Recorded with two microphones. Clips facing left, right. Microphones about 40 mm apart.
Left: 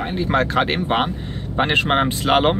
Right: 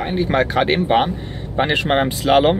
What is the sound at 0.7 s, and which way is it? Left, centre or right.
Speech, centre.